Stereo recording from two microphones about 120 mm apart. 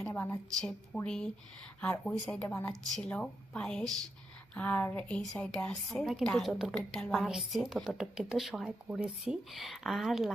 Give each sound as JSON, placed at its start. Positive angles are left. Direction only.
{"t": 0.1, "sound": "a woman's voice", "side_deg": 20}
{"t": 0.9, "sound": "a woman's voice", "side_deg": 5}